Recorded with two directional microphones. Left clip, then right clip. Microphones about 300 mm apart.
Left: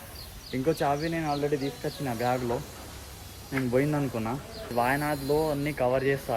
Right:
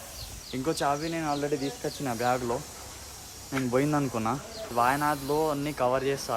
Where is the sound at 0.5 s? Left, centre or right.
Centre.